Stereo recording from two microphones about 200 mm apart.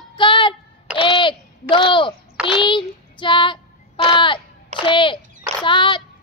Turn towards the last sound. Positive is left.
turn(degrees=25)  # may be behind; listen again after turning